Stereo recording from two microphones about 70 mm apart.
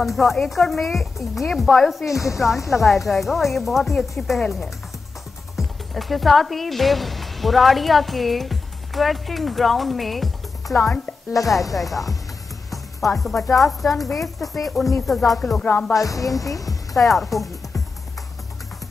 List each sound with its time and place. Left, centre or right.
0.0 s speech: centre
2.0 s a woman's voice: left
2.3 s speech: centre
11.4 s a woman's voice: left
11.7 s speech: centre
16.0 s a woman's voice: left
16.9 s music: centre